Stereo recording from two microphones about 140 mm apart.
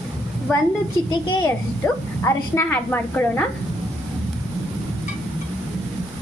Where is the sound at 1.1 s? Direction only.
35° left (ahead or behind).